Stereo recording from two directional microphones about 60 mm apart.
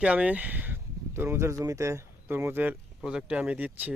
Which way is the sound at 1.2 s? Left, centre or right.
Right.